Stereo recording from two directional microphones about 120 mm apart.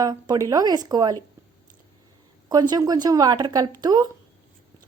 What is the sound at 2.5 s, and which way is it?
A woman's voice, 35° right (ahead or behind).